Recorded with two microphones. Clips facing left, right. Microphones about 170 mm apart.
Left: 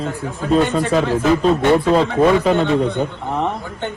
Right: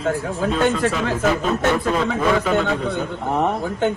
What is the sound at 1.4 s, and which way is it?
Speech, 30° left (ahead or behind).